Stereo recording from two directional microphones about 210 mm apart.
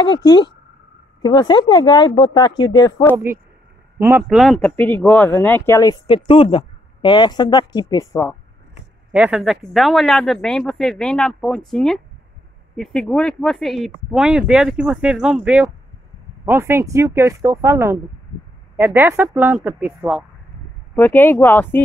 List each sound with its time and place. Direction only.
0.0 s speech: 20° left (ahead or behind)
4.0 s speech: 10° right (ahead or behind); by 8.4 s 15° left (ahead or behind)
9.1 s speech: 5° right (ahead or behind)
20.9 s speech: 10° left (ahead or behind)